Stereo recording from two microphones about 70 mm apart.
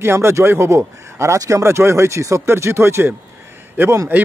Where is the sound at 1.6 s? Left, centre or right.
Right.